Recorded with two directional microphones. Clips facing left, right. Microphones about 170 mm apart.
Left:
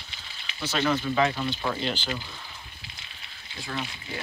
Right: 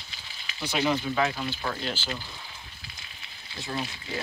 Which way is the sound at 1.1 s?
Centre (ahead or behind).